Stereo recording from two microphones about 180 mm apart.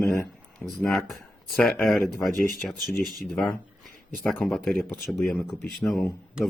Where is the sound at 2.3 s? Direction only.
50° left (ahead or behind).